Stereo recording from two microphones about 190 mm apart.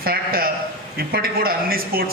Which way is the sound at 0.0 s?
50° right (ahead or behind).